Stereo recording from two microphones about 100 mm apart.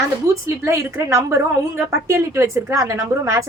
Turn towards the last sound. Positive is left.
turn(degrees=-35)  # may be behind; listen again after turning